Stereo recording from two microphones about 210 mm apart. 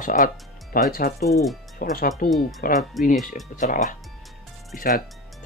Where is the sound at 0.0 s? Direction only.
35° left (ahead or behind).